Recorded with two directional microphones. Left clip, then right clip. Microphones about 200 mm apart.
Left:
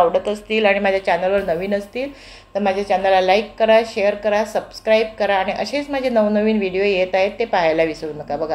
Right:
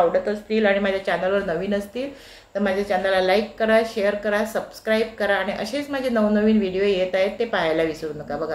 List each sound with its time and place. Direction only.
0.1 s a woman's voice: 25° left (ahead or behind)
0.8 s a woman's voice: 5° left (ahead or behind)